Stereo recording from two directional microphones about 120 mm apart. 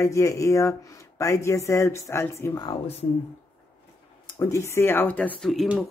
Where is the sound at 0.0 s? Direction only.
25° left (ahead or behind).